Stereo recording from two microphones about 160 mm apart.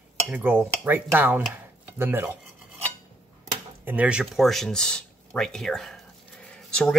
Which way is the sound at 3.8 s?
10° right (ahead or behind).